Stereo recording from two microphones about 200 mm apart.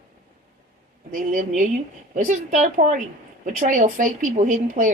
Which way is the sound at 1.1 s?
40° right (ahead or behind).